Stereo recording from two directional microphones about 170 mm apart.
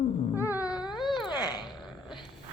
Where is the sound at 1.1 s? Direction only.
25° left (ahead or behind).